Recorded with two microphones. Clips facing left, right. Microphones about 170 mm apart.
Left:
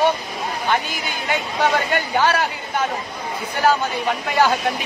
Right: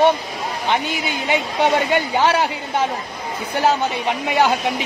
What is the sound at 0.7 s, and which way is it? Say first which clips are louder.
A woman's voice: right 3 dB; 25° right (ahead or behind).